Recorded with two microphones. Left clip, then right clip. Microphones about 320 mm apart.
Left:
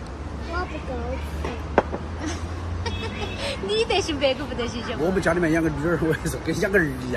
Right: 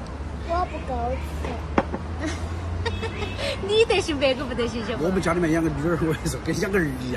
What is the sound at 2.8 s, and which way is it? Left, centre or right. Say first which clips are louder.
Speech: right 1 dB; right.